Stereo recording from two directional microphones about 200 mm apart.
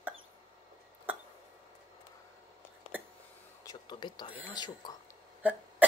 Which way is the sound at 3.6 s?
20° left (ahead or behind).